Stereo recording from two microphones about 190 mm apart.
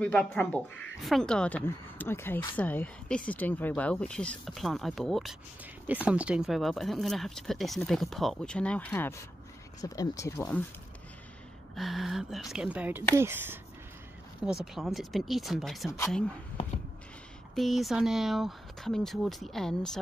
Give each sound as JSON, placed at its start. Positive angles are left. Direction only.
{"t": 0.0, "sound": "speech", "side_deg": 5}
{"t": 11.7, "sound": "speech", "side_deg": 0}
{"t": 17.6, "sound": "speech", "side_deg": 0}